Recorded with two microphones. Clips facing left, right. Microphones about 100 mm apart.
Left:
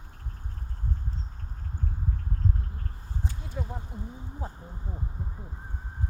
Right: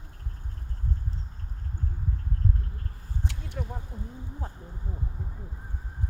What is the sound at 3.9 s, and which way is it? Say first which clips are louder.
Speech: left 1 dB; 10° left (ahead or behind).